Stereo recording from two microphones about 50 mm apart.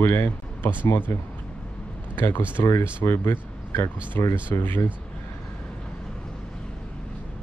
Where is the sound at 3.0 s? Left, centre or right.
Left.